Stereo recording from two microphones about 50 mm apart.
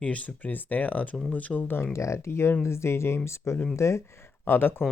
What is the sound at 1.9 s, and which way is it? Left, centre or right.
Speech, left.